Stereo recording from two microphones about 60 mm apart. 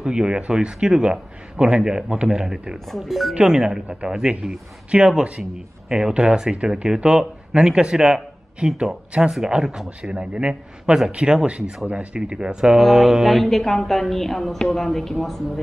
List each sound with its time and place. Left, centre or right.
0.0 s speech: centre
2.9 s speech: centre
3.3 s speech: centre